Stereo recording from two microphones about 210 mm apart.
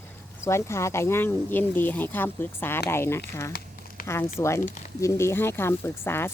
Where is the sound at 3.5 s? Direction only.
45° left (ahead or behind).